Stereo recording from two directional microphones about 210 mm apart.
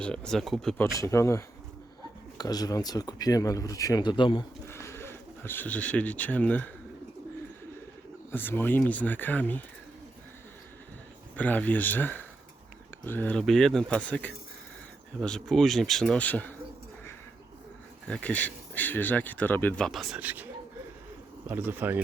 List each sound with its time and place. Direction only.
0.0 s speech: 5° left (ahead or behind)
0.9 s speech: 15° left (ahead or behind)
4.7 s speech: 10° left (ahead or behind)
8.3 s speech: 10° left (ahead or behind)
11.3 s speech: 10° left (ahead or behind)
18.1 s speech: 5° left (ahead or behind); by 22.0 s 10° right (ahead or behind)